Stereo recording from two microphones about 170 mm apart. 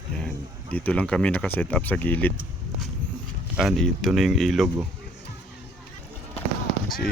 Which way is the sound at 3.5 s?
Centre (ahead or behind).